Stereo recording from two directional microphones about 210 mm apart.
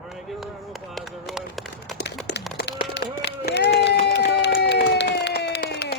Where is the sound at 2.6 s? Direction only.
50° left (ahead or behind).